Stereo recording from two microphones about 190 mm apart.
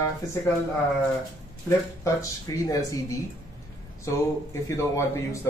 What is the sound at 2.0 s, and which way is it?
Speech, 15° left (ahead or behind).